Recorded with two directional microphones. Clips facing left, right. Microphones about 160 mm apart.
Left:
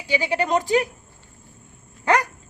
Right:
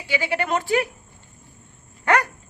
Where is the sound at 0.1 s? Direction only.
15° left (ahead or behind).